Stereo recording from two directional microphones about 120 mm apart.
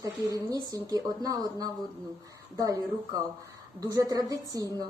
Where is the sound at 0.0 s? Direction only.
30° right (ahead or behind).